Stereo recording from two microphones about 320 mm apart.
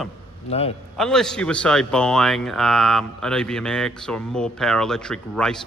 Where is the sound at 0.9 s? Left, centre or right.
Centre.